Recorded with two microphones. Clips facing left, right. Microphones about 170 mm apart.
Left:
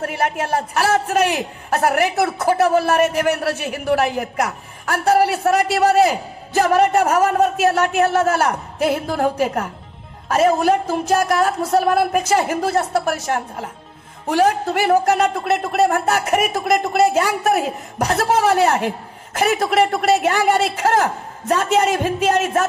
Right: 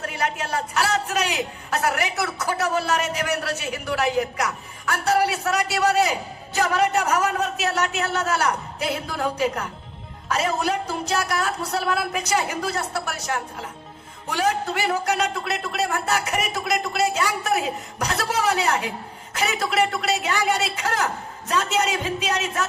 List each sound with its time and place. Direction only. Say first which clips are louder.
0.0 s a woman's voice: left 6 dB; 50° left (ahead or behind)